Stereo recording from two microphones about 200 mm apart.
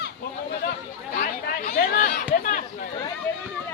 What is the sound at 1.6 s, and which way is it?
Chatter, 45° left (ahead or behind).